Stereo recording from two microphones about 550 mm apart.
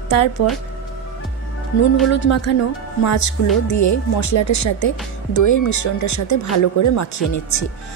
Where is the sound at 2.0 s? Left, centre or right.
Left.